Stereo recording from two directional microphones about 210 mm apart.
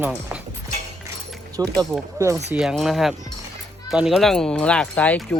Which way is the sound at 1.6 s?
15° right (ahead or behind).